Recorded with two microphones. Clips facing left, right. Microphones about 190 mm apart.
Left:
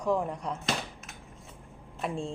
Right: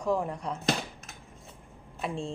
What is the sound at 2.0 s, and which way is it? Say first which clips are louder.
Speech: left 1 dB; centre (ahead or behind).